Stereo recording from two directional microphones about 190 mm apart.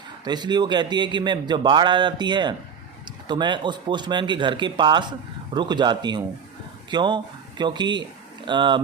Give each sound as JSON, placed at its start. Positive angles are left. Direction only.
{"t": 0.3, "sound": "a man's voice", "side_deg": -25}